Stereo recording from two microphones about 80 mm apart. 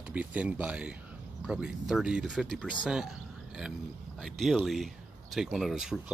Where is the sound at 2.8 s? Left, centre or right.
Centre.